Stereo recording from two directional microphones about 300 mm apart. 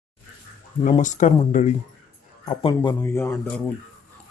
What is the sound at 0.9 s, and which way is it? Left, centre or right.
A man's voice, left.